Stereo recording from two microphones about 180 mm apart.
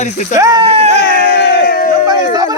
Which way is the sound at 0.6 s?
35° right (ahead or behind).